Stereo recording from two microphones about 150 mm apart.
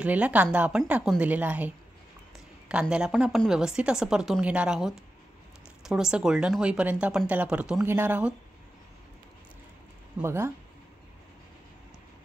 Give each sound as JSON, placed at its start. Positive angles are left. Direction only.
{"t": 0.0, "sound": "a woman's voice", "side_deg": -10}
{"t": 2.7, "sound": "a woman's voice", "side_deg": -5}
{"t": 10.2, "sound": "a woman's voice", "side_deg": -15}